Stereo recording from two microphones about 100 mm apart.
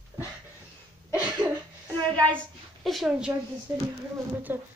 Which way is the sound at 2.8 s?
Centre (ahead or behind).